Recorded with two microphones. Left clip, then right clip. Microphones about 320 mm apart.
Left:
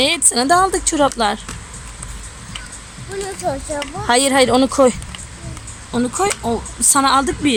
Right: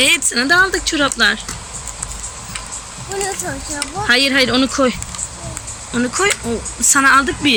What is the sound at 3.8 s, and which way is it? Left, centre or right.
Speech, centre.